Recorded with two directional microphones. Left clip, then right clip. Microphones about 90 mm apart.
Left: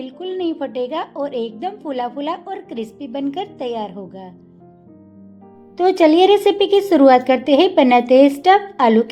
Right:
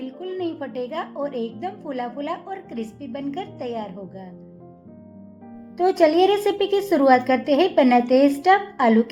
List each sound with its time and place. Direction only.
0.0 s a woman's voice: 55° left (ahead or behind)
5.7 s a woman's voice: 55° left (ahead or behind)